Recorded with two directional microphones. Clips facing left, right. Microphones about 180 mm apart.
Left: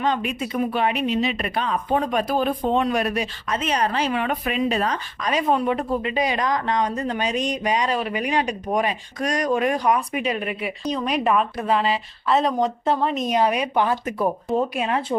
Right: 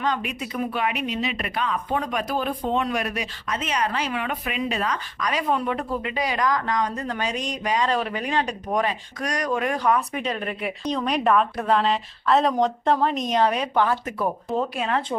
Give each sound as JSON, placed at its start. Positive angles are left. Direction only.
{"t": 0.0, "sound": "speech", "side_deg": 25}
{"t": 7.9, "sound": "speech", "side_deg": 10}